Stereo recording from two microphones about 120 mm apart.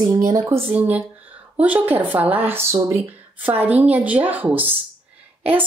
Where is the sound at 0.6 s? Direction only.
15° right (ahead or behind).